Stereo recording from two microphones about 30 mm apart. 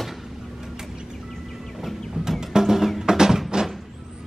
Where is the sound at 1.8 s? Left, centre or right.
Centre.